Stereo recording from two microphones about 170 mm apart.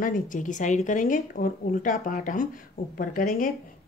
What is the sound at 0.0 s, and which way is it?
Speech, 50° left (ahead or behind).